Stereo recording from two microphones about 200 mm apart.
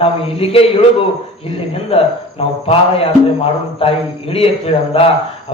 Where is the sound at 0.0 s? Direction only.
30° left (ahead or behind).